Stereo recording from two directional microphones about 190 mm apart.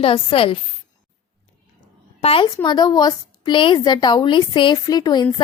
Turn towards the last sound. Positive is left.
turn(degrees=20)  # may be behind; listen again after turning